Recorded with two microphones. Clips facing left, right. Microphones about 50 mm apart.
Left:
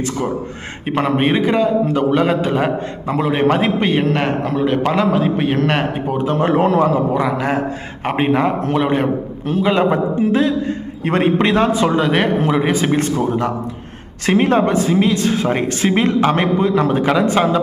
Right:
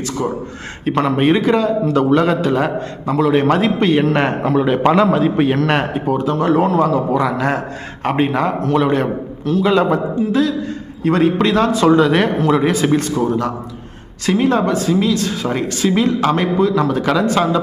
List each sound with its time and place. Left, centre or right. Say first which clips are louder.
0.9 s a man's voice: right 2 dB; centre
4.0 s a man's voice: right 2 dB; centre
6.3 s speech: left 1 dB; left
6.7 s a man's voice: even; centre
11.0 s a man's voice: right 1 dB; left; by 13.0 s centre
13.0 s a man's voice: even; left
14.3 s a man's voice: left 1 dB; left